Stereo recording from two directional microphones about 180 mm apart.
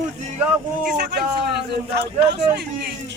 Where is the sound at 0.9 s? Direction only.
65° right (ahead or behind).